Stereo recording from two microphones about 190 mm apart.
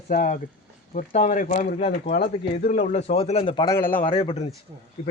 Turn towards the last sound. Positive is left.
turn(degrees=35)  # may be behind; listen again after turning